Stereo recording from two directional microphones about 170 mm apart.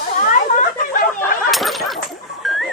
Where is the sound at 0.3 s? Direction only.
50° left (ahead or behind).